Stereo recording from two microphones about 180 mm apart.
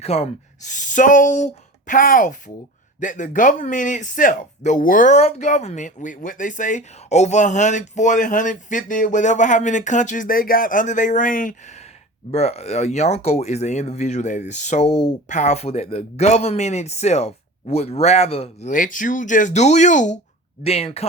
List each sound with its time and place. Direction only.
0.0 s speech: 35° left (ahead or behind)
18.7 s speech: 45° left (ahead or behind)